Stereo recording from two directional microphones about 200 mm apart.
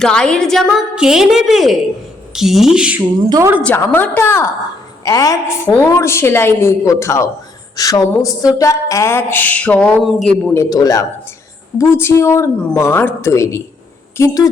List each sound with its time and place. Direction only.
0.0 s a woman's voice: 5° left (ahead or behind)
3.2 s a woman's voice: 15° right (ahead or behind)
3.6 s a woman's voice: 10° left (ahead or behind)